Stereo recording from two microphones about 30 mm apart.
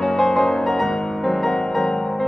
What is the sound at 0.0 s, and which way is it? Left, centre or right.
Music, centre.